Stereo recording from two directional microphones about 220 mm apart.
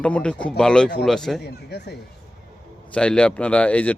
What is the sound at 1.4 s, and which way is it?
Speech, 50° left (ahead or behind).